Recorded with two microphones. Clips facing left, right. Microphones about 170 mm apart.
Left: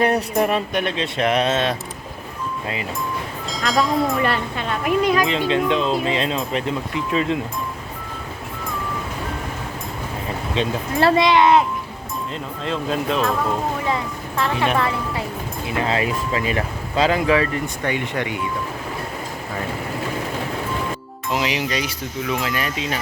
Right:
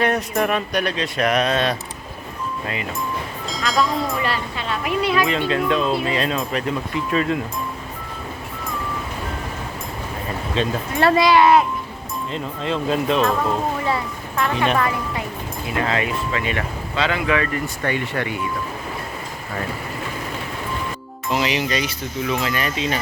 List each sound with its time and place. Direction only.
0.0 s speech: 30° left (ahead or behind)
3.5 s speech: centre (ahead or behind)
4.2 s speech: 50° left (ahead or behind)
5.2 s speech: 20° left (ahead or behind)
10.5 s speech: 20° left (ahead or behind)
12.3 s speech: centre (ahead or behind)
14.5 s speech: 5° left (ahead or behind)
14.8 s speech: 30° left (ahead or behind)
17.8 s speech: 15° left (ahead or behind)
21.3 s speech: 10° left (ahead or behind)